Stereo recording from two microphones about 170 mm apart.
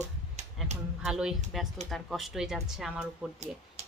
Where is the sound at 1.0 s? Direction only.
5° right (ahead or behind).